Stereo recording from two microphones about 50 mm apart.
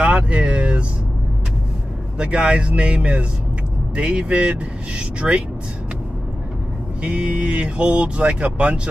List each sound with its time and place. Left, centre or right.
0.0 s vehicle: right
2.1 s speech: right
7.0 s speech: right